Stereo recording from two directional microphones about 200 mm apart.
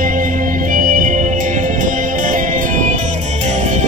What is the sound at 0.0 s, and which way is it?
Music, 40° right (ahead or behind).